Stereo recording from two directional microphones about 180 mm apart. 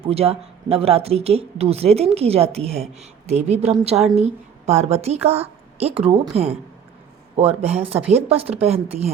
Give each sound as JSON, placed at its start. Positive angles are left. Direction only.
{"t": 0.1, "sound": "speech", "side_deg": -35}
{"t": 3.9, "sound": "a woman's voice", "side_deg": 0}
{"t": 4.2, "sound": "a woman's voice", "side_deg": -40}